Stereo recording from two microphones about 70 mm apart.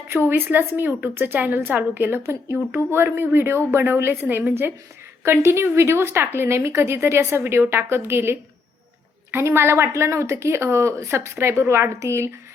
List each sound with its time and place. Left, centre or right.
0.1 s speech: right